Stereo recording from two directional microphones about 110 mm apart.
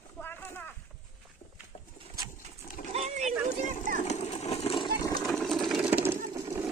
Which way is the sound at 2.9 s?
80° right.